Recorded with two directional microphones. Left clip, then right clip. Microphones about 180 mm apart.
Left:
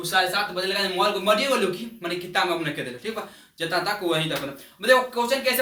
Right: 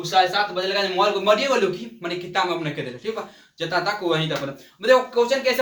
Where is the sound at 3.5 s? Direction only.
5° right (ahead or behind).